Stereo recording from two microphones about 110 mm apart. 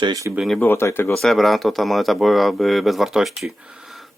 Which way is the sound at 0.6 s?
20° left (ahead or behind).